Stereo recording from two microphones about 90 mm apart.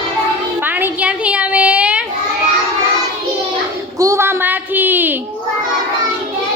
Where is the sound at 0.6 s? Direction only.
20° right (ahead or behind).